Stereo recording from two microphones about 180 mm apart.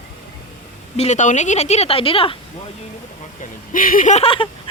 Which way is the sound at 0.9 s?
40° left (ahead or behind).